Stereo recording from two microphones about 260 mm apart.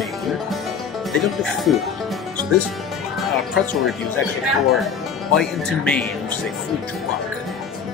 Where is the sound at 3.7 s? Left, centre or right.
Centre.